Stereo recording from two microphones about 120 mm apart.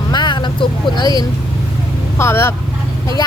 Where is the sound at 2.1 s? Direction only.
20° left (ahead or behind).